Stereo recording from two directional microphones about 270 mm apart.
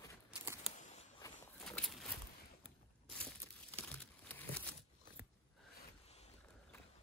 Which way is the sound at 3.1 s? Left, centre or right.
Centre.